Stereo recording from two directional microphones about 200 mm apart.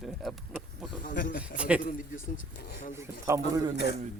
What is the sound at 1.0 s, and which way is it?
Speech, 40° left (ahead or behind).